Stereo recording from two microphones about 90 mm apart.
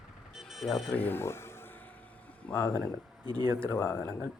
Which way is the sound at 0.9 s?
20° left (ahead or behind).